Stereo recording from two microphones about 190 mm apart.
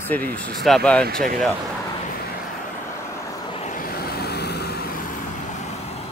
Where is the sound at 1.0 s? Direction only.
50° right (ahead or behind).